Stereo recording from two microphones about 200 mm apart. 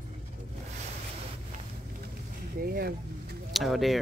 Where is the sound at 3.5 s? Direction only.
Centre (ahead or behind).